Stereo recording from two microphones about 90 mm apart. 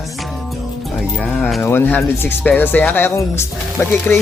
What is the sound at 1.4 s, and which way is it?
Speech, centre (ahead or behind).